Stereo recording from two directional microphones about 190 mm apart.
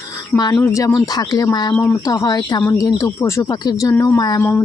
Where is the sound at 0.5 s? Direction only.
15° left (ahead or behind).